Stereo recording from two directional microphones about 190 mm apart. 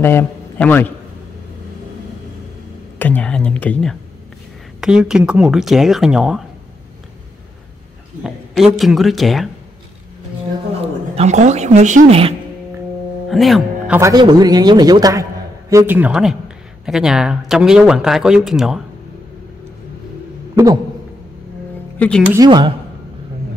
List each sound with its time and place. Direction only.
0.0 s a man's voice: 10° left (ahead or behind)
3.0 s a sound: 10° left (ahead or behind)
4.7 s speech: 5° right (ahead or behind)
8.2 s speech: centre (ahead or behind)
10.8 s a woman's voice: 35° right (ahead or behind)
13.3 s speech: centre (ahead or behind)
13.9 s a man's voice: 15° right (ahead or behind)
20.5 s speech: 20° right (ahead or behind)
21.9 s music: 10° left (ahead or behind)
22.3 s speech: 20° right (ahead or behind)